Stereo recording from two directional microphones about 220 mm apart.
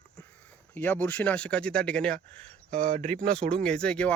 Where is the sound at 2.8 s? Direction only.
40° right (ahead or behind).